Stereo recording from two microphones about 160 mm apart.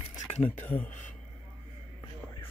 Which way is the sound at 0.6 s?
10° left (ahead or behind).